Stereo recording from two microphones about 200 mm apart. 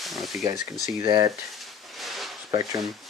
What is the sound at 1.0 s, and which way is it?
Speech, 20° right (ahead or behind).